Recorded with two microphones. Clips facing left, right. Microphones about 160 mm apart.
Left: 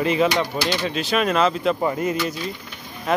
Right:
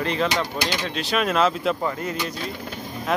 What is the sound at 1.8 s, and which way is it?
Speech, 15° left (ahead or behind).